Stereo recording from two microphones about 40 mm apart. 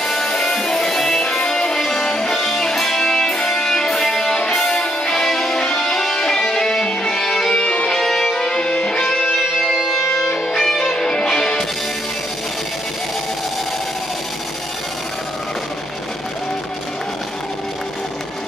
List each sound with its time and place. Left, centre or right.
0.0 s music: centre
7.5 s music: left
8.0 s music: centre
8.5 s music: left